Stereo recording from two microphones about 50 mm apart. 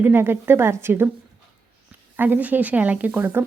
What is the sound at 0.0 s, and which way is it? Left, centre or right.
A woman's voice, right.